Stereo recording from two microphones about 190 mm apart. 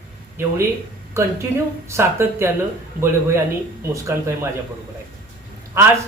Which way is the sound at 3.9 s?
15° right (ahead or behind).